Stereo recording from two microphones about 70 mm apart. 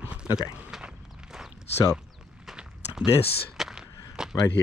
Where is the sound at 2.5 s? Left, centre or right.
Centre.